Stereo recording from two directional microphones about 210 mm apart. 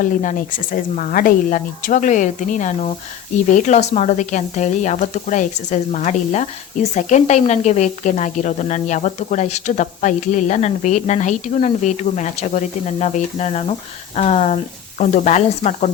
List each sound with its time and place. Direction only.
0.0 s speech: 40° left (ahead or behind)